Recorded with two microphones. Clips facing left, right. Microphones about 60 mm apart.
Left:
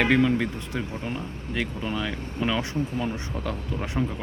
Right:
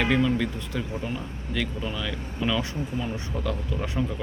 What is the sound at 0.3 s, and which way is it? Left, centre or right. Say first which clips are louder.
Speech: even; left.